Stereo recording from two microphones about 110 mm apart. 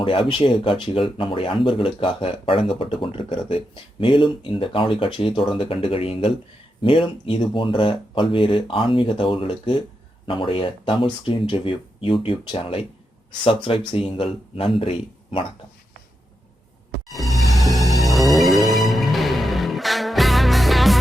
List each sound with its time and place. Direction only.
0.0 s a man's voice: 50° left (ahead or behind)
17.2 s music: centre (ahead or behind)